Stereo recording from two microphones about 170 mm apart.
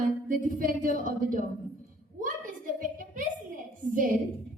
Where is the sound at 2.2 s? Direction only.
50° right (ahead or behind).